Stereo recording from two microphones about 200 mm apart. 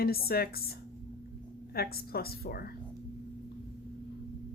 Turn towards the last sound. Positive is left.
turn(degrees=50)  # may be behind; listen again after turning